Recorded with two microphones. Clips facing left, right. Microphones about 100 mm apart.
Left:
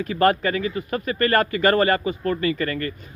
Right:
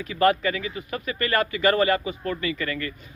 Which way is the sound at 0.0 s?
45° left (ahead or behind).